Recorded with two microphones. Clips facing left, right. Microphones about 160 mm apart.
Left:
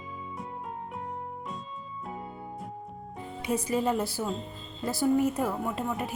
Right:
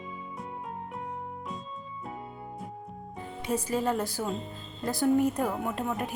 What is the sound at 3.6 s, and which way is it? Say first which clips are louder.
A woman's voice: left 2 dB; 10° left (ahead or behind).